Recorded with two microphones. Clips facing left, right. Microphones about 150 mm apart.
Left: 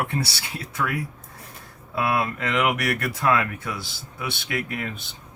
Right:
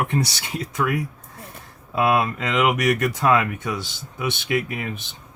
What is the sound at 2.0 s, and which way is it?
Speech, 20° right (ahead or behind).